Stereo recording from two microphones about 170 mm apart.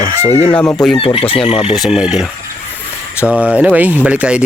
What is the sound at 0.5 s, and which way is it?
Speech, 5° left (ahead or behind).